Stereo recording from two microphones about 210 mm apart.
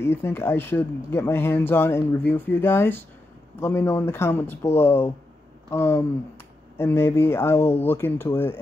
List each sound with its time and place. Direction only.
0.0 s speech: 10° left (ahead or behind)